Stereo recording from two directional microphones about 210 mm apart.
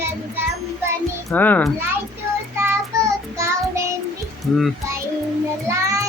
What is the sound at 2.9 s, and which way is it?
Child singing, 15° right (ahead or behind).